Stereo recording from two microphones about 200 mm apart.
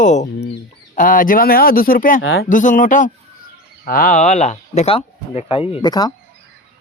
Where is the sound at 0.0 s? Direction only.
35° left (ahead or behind).